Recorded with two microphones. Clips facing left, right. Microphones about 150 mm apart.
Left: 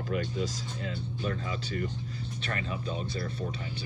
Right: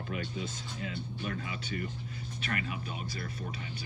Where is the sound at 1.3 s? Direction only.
35° left (ahead or behind).